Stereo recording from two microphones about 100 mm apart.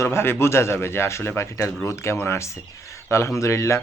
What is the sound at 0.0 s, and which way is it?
Speech, 25° left (ahead or behind).